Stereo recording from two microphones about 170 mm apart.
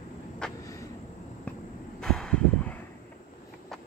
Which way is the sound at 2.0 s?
5° left (ahead or behind).